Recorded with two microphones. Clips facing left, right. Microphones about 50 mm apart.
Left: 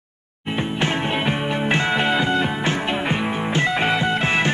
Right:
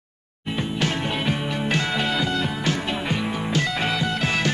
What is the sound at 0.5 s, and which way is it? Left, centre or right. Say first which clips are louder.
Music: left 3 dB; left.